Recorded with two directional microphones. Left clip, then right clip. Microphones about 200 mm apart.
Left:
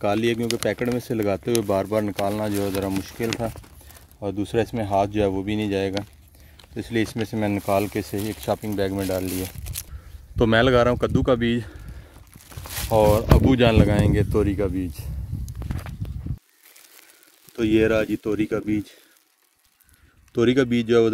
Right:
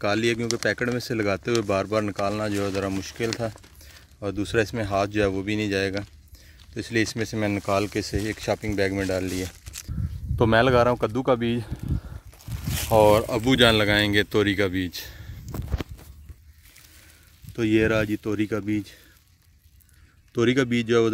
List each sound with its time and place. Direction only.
0.0 s speech: centre (ahead or behind)
9.7 s a sound: 50° left (ahead or behind)
10.3 s speech: 5° left (ahead or behind)
12.9 s speech: 5° right (ahead or behind)
17.6 s speech: centre (ahead or behind)
20.3 s speech: centre (ahead or behind)